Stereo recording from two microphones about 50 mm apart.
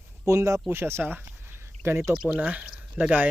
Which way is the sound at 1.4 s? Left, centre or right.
Right.